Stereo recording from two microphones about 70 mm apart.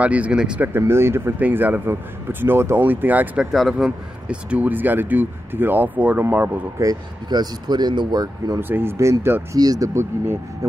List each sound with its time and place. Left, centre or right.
0.0 s speech: centre
0.7 s speech: right
1.4 s speech: right
3.7 s speech: centre
6.8 s speech: right
8.5 s speech: right
8.9 s speech: right
9.6 s speech: right
9.9 s speech: right
10.6 s speech: right